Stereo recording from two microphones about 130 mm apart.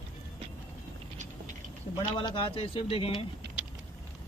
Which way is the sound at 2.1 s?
40° left (ahead or behind).